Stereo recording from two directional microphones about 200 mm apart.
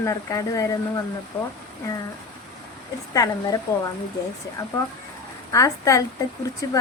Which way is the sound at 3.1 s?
15° left (ahead or behind).